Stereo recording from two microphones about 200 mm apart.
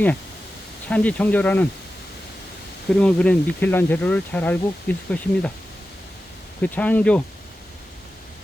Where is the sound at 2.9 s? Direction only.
5° left (ahead or behind).